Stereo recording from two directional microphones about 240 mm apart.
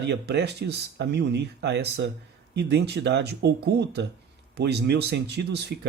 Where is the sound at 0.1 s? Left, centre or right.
Right.